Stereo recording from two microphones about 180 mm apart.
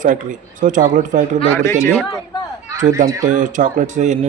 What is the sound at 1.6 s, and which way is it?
Speech, 15° left (ahead or behind).